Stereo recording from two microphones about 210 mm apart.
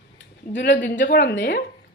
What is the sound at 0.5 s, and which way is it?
Speech, 60° left (ahead or behind).